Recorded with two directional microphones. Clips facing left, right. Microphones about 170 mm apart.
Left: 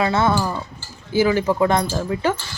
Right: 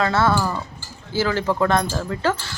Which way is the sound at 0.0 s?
15° left (ahead or behind).